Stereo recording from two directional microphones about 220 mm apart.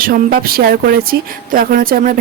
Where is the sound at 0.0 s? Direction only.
40° right (ahead or behind).